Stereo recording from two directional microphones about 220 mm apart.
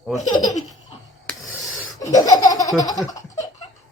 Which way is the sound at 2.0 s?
15° left (ahead or behind).